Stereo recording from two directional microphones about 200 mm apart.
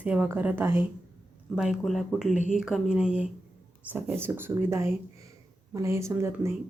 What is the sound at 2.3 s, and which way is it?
Speech, 40° left (ahead or behind).